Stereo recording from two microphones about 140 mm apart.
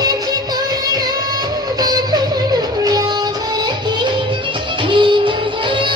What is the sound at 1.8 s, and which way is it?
Music, 30° right (ahead or behind).